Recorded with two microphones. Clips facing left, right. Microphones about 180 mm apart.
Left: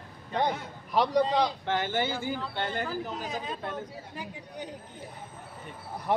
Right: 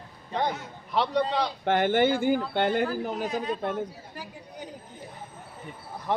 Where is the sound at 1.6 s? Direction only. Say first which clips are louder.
Right 7 dB; 55° right (ahead or behind).